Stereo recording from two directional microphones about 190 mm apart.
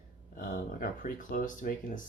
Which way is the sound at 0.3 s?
50° left (ahead or behind).